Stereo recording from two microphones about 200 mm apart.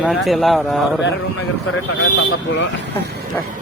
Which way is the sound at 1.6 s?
85° left.